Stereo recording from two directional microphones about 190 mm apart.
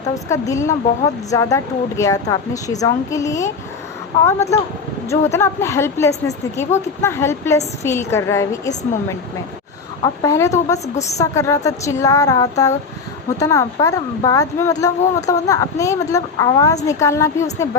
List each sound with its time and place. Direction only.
0.1 s a woman's voice: 15° left (ahead or behind)